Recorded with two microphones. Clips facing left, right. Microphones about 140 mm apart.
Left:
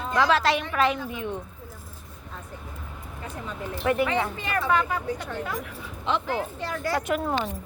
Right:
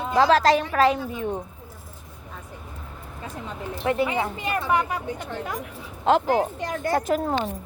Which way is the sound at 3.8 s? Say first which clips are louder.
Even; 25° right (ahead or behind).